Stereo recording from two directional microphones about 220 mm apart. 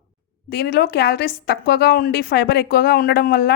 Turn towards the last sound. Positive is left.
turn(degrees=45)  # may be behind; listen again after turning